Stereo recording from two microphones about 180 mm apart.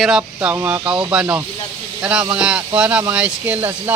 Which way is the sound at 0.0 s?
5° right (ahead or behind).